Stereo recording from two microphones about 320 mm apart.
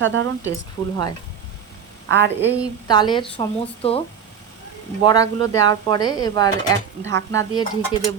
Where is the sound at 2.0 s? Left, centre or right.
Right.